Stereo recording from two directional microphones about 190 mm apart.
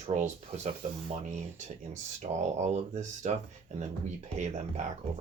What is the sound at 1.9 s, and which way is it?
Speech, 30° right (ahead or behind).